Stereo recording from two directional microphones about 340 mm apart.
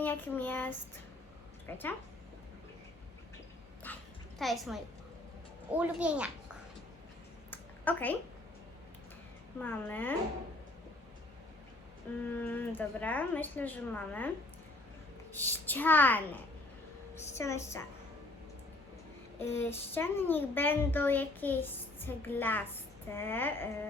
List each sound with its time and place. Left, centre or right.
0.0 s a child's voice: centre
3.9 s a child's voice: centre
7.5 s a sound: centre
9.6 s a child's voice: centre
12.3 s a child's voice: centre
15.3 s a child's voice: centre
19.4 s a child's voice: centre